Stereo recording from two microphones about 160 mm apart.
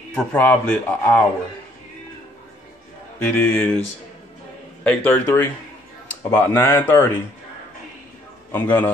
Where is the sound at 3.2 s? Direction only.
10° left (ahead or behind).